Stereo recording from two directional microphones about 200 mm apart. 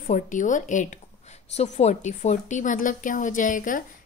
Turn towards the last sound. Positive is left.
turn(degrees=40)  # may be behind; listen again after turning